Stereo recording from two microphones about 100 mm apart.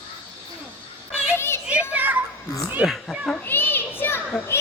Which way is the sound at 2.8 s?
15° right (ahead or behind).